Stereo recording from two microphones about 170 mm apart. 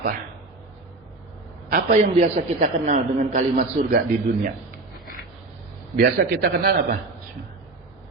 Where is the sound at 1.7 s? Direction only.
50° right (ahead or behind).